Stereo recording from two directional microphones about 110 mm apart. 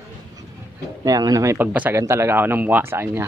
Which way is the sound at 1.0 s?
30° right (ahead or behind).